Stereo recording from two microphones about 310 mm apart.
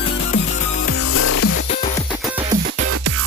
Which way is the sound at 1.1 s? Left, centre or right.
Left.